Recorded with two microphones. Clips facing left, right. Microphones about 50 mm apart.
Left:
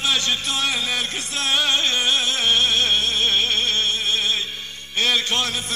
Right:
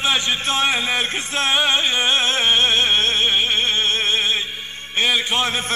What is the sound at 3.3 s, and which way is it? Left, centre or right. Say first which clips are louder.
Music: right 2 dB; right.